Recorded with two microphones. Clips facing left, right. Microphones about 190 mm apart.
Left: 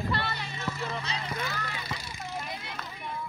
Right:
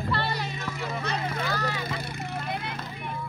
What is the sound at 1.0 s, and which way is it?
Vehicle, 60° right (ahead or behind).